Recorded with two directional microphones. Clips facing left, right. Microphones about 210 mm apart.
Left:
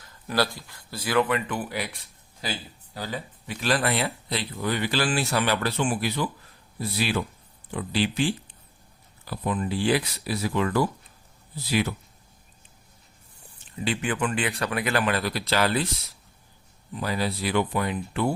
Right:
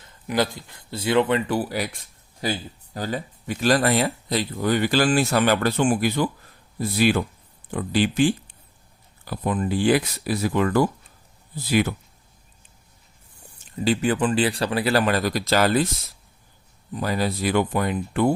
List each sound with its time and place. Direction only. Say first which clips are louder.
0.0 s speech: right 3 dB; 20° right (ahead or behind); by 11.9 s 50° right (ahead or behind)
13.7 s speech: right 6 dB; 40° right (ahead or behind)
16.9 s speech: right 3 dB; 45° right (ahead or behind)